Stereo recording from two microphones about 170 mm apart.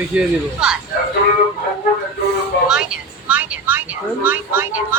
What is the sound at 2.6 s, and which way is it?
A woman's voice, 5° right (ahead or behind).